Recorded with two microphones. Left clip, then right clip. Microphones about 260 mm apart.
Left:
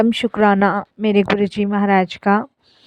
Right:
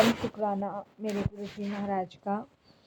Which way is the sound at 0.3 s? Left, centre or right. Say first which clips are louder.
Left 17 dB; left.